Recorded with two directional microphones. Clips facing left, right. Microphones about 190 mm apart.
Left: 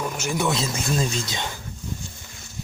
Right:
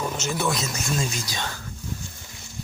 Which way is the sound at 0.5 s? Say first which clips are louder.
Left 3 dB; 30° left (ahead or behind).